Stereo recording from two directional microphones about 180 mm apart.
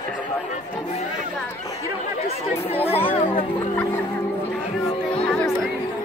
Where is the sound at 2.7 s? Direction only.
35° left (ahead or behind).